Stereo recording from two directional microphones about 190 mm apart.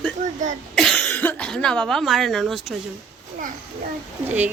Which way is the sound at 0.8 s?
5° left (ahead or behind).